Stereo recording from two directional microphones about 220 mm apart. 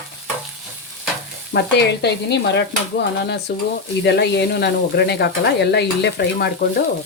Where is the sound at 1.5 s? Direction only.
50° left (ahead or behind).